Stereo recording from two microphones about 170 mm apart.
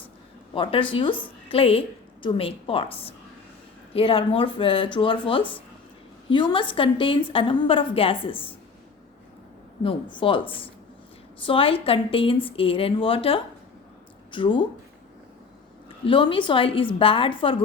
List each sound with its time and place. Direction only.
0.5 s a woman's voice: 30° left (ahead or behind)
9.8 s a woman's voice: 30° left (ahead or behind)
16.0 s a woman's voice: 30° left (ahead or behind)